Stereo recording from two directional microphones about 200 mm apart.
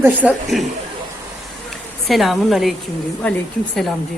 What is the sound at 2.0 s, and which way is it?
Speech, centre (ahead or behind).